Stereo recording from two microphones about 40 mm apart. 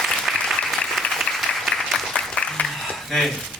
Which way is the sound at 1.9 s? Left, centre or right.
Centre.